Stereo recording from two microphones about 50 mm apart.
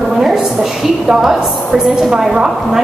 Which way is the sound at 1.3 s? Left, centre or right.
Centre.